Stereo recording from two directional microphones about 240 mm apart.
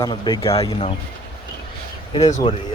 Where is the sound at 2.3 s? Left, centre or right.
Left.